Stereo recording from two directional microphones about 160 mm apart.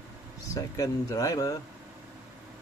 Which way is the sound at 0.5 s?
20° left (ahead or behind).